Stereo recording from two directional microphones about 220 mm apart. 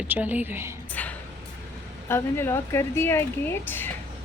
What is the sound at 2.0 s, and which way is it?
Speech, 10° left (ahead or behind).